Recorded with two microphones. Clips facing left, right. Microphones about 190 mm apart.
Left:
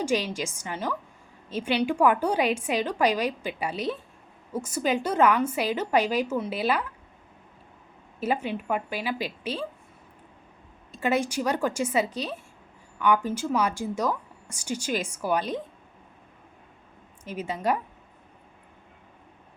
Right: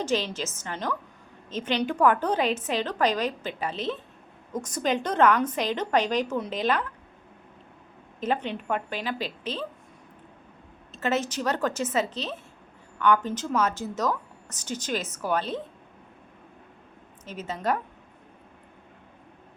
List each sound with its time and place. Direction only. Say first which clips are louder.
0.0 s a woman's voice: left 1 dB; 10° left (ahead or behind)
8.2 s a woman's voice: left 1 dB; 10° left (ahead or behind)
10.9 s a woman's voice: left 2 dB; 10° left (ahead or behind)
17.2 s a woman's voice: left 1 dB; 10° left (ahead or behind)